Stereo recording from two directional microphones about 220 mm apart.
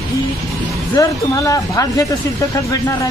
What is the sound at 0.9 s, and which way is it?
Speech, 15° left (ahead or behind).